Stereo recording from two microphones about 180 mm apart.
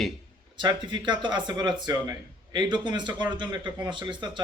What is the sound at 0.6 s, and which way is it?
A man's voice, 25° right (ahead or behind).